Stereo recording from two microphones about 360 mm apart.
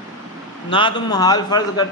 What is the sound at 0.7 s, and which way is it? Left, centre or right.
A man's voice, centre.